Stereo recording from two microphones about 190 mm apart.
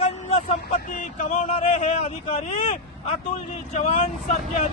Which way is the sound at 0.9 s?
40° left (ahead or behind).